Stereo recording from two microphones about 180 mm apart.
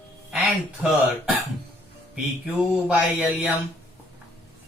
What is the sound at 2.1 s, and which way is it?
Mantra, 5° right (ahead or behind).